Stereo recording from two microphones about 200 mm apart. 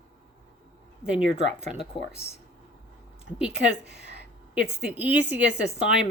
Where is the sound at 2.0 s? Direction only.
25° left (ahead or behind).